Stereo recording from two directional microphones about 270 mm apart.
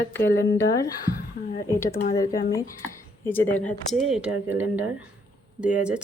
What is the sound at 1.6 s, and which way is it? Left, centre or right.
Speech, centre.